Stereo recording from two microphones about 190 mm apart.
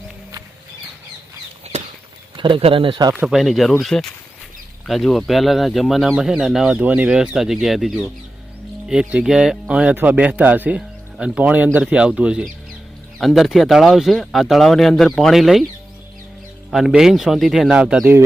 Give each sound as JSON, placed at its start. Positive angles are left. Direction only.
{"t": 2.3, "sound": "speech", "side_deg": -25}
{"t": 3.2, "sound": "speech", "side_deg": 0}
{"t": 16.7, "sound": "speech", "side_deg": 0}